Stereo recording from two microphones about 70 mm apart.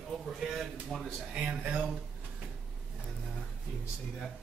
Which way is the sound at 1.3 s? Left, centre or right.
Right.